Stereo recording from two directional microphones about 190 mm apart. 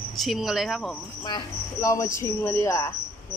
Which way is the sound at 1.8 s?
15° left (ahead or behind).